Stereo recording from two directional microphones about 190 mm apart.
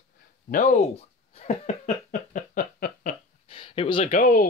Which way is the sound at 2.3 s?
50° left (ahead or behind).